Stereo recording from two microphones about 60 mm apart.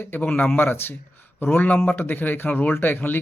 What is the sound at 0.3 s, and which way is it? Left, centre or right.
Speech, left.